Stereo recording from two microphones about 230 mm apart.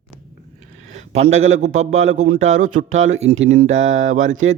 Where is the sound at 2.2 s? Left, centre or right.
Right.